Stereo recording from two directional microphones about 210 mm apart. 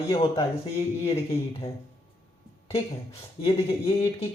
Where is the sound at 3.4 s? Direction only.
25° left (ahead or behind).